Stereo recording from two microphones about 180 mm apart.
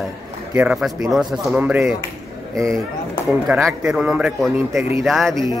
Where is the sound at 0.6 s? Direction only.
5° right (ahead or behind).